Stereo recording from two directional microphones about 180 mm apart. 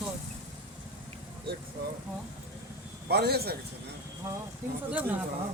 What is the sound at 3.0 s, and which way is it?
Speech, 65° right (ahead or behind).